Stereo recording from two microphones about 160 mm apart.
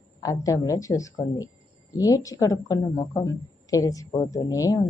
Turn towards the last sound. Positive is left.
turn(degrees=20)  # may be behind; listen again after turning